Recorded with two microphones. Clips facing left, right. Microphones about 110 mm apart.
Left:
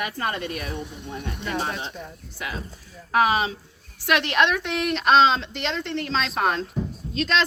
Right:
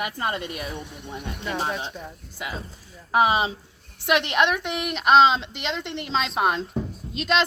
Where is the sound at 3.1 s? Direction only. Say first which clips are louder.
Even; 20° right (ahead or behind).